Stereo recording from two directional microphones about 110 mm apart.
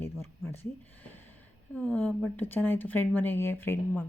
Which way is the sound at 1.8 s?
15° left (ahead or behind).